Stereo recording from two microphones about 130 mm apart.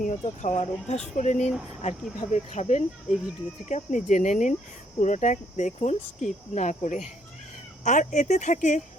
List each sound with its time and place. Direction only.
0.0 s speech: 60° left (ahead or behind)
3.7 s speech: 70° left (ahead or behind)